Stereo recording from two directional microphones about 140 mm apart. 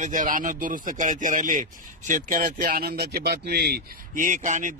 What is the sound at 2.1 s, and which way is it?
A man's voice, 85° right.